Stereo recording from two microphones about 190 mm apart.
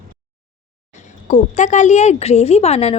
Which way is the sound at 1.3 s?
40° left (ahead or behind).